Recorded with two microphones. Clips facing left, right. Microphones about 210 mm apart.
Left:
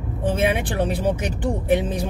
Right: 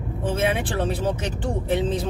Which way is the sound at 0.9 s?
15° left (ahead or behind).